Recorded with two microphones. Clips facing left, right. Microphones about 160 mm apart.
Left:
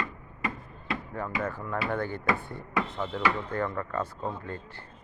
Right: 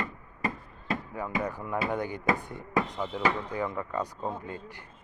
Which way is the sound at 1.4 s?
15° right (ahead or behind).